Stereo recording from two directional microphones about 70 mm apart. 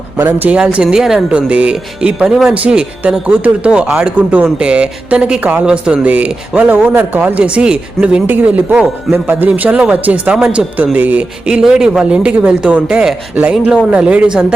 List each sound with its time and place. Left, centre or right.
0.2 s speech: right
0.5 s speech: centre
2.3 s speech: centre; by 10.3 s right
10.3 s speech: centre
10.9 s speech: right